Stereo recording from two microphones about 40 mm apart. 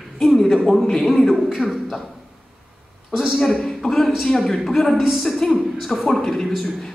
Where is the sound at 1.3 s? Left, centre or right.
Centre.